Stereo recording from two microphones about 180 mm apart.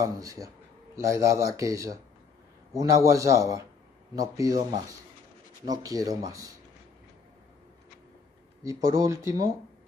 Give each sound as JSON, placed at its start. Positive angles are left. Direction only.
{"t": 0.0, "sound": "speech", "side_deg": -20}
{"t": 8.6, "sound": "speech", "side_deg": -15}